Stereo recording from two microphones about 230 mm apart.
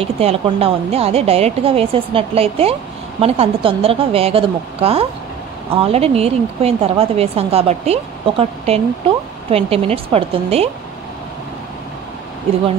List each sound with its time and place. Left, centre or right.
0.0 s speech: right